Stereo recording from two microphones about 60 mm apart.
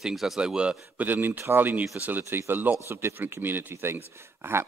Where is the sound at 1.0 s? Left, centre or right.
Right.